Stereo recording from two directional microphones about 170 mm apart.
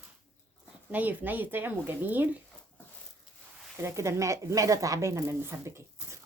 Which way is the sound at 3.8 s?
15° right (ahead or behind).